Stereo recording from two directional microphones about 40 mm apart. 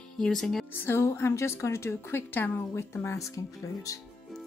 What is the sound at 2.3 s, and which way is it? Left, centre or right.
Speech, left.